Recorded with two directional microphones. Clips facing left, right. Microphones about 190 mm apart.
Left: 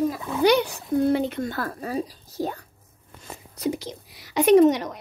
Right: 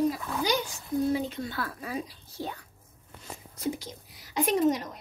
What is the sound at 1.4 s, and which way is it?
Speech, 45° left (ahead or behind).